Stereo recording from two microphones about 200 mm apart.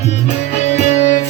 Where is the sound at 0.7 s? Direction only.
35° left (ahead or behind).